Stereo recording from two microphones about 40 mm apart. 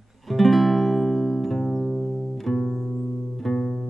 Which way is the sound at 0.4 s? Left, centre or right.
Centre.